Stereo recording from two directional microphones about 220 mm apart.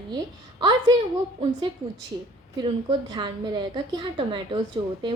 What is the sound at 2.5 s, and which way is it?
A woman's voice, 20° right (ahead or behind).